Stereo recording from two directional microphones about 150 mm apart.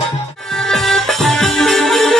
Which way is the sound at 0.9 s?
Centre (ahead or behind).